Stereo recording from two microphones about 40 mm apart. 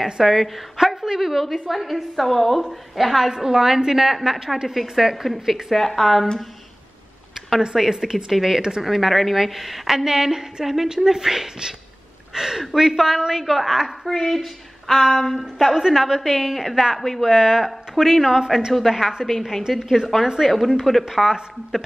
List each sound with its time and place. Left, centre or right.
0.0 s a woman's voice: centre
7.7 s a woman's voice: centre
14.1 s a woman's voice: centre
17.3 s a woman's voice: centre
21.1 s a woman's voice: centre